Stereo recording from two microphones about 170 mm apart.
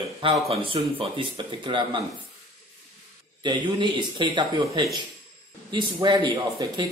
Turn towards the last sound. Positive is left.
turn(degrees=-25)  # may be behind; listen again after turning